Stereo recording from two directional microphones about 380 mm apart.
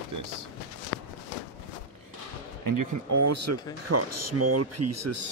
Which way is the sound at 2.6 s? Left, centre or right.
Right.